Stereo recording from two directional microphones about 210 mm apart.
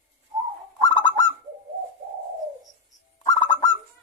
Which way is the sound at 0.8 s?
20° left (ahead or behind).